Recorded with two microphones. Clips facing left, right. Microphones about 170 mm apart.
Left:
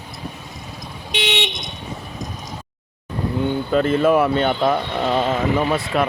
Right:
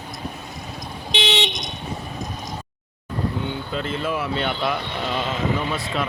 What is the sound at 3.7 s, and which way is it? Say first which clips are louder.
Speech: left 12 dB; 50° left (ahead or behind).